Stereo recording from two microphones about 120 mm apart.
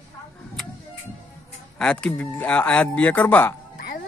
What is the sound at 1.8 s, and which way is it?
Speech, 5° left (ahead or behind).